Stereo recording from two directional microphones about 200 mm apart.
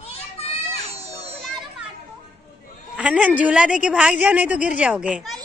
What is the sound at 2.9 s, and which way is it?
A woman's voice, 5° right (ahead or behind).